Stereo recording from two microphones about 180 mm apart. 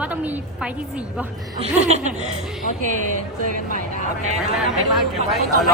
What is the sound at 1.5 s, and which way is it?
Laughter, 35° right (ahead or behind).